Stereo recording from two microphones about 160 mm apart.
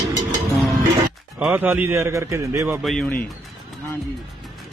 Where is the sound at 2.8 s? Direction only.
5° left (ahead or behind).